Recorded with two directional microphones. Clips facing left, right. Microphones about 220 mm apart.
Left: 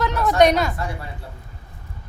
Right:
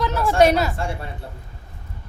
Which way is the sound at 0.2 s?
30° right (ahead or behind).